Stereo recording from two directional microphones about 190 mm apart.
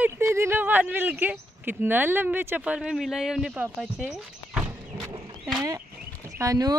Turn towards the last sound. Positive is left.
turn(degrees=-20)  # may be behind; listen again after turning